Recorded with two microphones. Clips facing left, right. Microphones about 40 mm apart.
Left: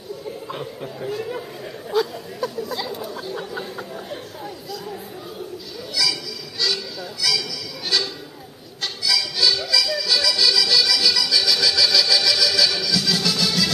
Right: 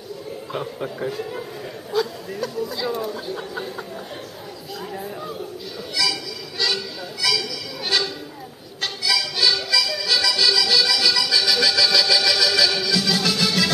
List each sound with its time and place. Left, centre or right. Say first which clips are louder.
1.9 s speech: left 1 dB; centre
6.6 s music: right 1 dB; centre
9.0 s music: even; centre